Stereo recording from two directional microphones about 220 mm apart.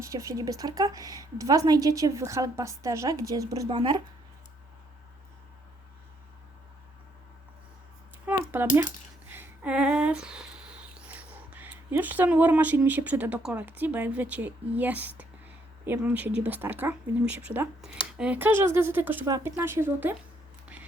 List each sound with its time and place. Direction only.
0.0 s a woman's voice: 15° right (ahead or behind)
8.3 s a sound: 10° right (ahead or behind)
9.3 s a woman's voice: 5° right (ahead or behind)